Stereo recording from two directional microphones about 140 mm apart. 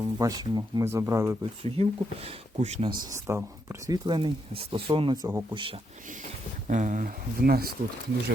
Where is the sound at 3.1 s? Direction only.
20° right (ahead or behind); by 5.8 s 35° right (ahead or behind).